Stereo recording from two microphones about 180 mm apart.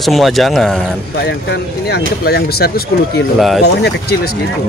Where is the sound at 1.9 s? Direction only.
60° left (ahead or behind).